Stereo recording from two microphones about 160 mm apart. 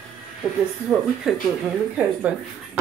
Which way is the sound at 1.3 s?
5° right (ahead or behind).